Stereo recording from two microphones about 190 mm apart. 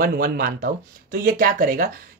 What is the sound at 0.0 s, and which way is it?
Speech, 50° right (ahead or behind).